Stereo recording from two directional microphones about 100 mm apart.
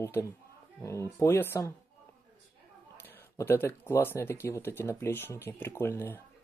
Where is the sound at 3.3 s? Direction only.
25° left (ahead or behind).